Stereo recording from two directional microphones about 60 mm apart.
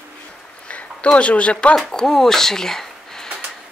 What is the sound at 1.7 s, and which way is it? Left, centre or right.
Speech, centre.